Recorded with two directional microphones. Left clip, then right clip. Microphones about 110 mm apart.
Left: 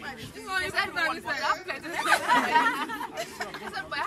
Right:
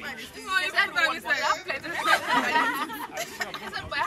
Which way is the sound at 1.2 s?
15° right (ahead or behind).